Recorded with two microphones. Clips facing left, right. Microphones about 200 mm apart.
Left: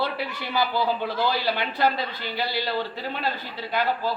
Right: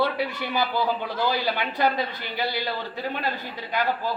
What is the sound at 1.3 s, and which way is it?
Speech, 15° right (ahead or behind).